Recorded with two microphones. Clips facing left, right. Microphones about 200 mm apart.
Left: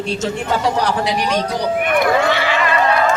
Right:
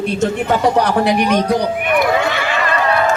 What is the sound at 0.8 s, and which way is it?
Speech, 55° right (ahead or behind).